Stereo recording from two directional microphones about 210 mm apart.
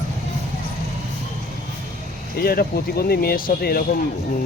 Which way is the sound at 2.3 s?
45° left (ahead or behind).